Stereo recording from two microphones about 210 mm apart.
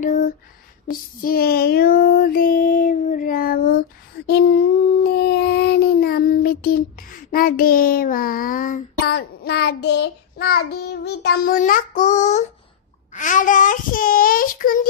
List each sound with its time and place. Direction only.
0.8 s child singing: 45° left (ahead or behind)
5.0 s child singing: 50° left (ahead or behind)
7.2 s a child's voice: 45° left (ahead or behind)